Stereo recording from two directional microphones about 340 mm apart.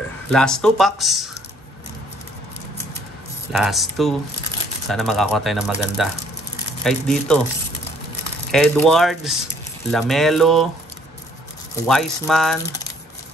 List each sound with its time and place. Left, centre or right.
0.3 s speech: centre
3.5 s speech: centre
8.5 s speech: centre
11.9 s speech: centre